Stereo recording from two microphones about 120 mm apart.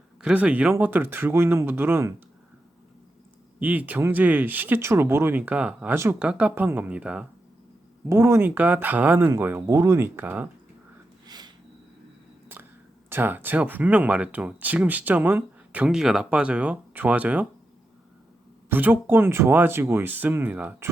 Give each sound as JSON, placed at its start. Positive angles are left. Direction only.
{"t": 0.2, "sound": "speech", "side_deg": -10}
{"t": 3.6, "sound": "speech", "side_deg": -15}
{"t": 8.1, "sound": "speech", "side_deg": -20}
{"t": 9.6, "sound": "speech", "side_deg": -25}
{"t": 11.3, "sound": "a sound", "side_deg": -35}
{"t": 12.5, "sound": "a sound", "side_deg": -15}
{"t": 13.1, "sound": "speech", "side_deg": -20}
{"t": 18.7, "sound": "speech", "side_deg": -15}